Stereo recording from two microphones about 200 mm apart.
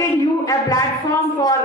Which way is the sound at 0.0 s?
15° left (ahead or behind).